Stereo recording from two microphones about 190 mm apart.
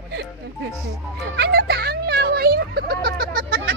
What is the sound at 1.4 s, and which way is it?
Music, 55° right (ahead or behind).